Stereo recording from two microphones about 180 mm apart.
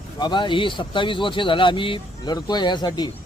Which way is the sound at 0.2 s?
25° left (ahead or behind).